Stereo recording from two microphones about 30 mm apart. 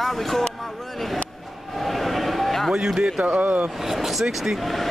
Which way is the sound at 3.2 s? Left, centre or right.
Right.